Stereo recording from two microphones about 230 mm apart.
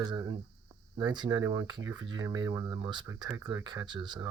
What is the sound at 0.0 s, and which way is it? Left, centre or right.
Speech, centre.